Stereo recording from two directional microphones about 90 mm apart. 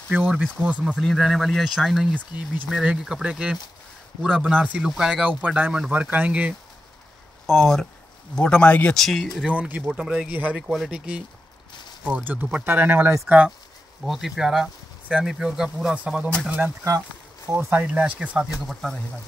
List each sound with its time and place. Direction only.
0.1 s speech: 15° right (ahead or behind)
0.9 s speech: centre (ahead or behind); by 6.5 s 15° right (ahead or behind)
7.4 s speech: 5° left (ahead or behind)
9.5 s speech: 15° right (ahead or behind)
12.6 s speech: 25° right (ahead or behind)
14.0 s speech: 5° right (ahead or behind); by 17.8 s 25° right (ahead or behind)
17.8 s speech: 15° right (ahead or behind)
18.7 s speech: centre (ahead or behind)